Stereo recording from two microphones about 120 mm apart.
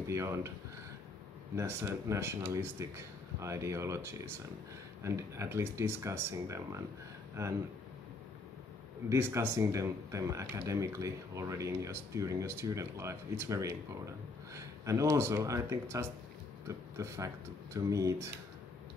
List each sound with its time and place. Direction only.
0.0 s a sound: 25° right (ahead or behind)
1.5 s speech: 20° right (ahead or behind)
9.1 s speech: 20° right (ahead or behind)